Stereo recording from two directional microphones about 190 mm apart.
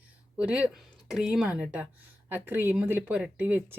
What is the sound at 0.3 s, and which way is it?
Speech, 5° right (ahead or behind).